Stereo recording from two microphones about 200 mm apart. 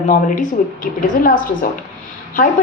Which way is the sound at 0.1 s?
40° left (ahead or behind).